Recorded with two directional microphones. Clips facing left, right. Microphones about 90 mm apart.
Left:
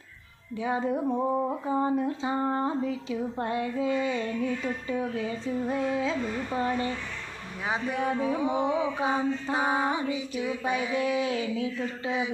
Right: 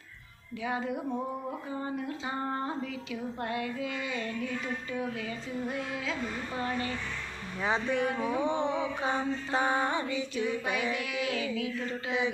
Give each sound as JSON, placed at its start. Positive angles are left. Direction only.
{"t": 0.6, "sound": "music", "side_deg": 30}
{"t": 1.6, "sound": "speech", "side_deg": 30}
{"t": 7.6, "sound": "mantra", "side_deg": 10}
{"t": 7.9, "sound": "speech", "side_deg": 25}
{"t": 8.4, "sound": "mantra", "side_deg": 10}
{"t": 10.6, "sound": "speech", "side_deg": 25}